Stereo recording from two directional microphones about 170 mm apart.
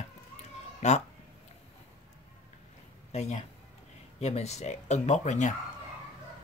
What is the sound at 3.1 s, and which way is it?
Speech, 40° left (ahead or behind).